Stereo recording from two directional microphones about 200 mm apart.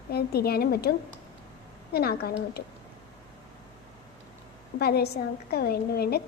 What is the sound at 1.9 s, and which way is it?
Speech, 50° left (ahead or behind).